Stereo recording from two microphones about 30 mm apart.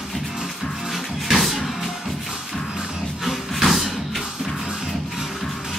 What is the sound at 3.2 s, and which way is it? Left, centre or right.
Music, centre.